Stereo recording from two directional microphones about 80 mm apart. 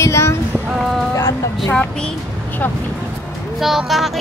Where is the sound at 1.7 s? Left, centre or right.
Centre.